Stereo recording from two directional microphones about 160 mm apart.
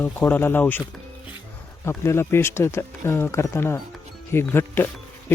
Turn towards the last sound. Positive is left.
turn(degrees=15)  # may be behind; listen again after turning